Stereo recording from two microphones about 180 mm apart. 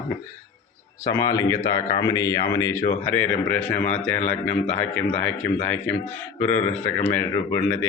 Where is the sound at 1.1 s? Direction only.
20° left (ahead or behind).